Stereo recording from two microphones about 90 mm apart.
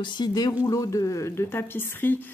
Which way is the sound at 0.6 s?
40° left (ahead or behind).